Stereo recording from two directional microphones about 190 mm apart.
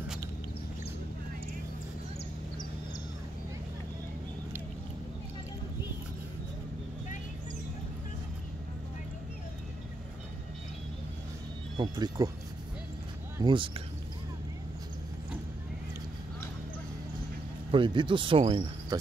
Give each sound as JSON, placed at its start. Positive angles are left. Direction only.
{"t": 11.7, "sound": "speech", "side_deg": -20}
{"t": 13.4, "sound": "speech", "side_deg": -25}
{"t": 17.6, "sound": "speech", "side_deg": -25}